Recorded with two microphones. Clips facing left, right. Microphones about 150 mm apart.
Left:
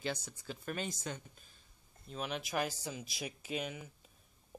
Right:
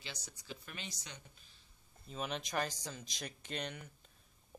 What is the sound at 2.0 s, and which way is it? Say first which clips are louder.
Speech: left 1 dB; centre (ahead or behind).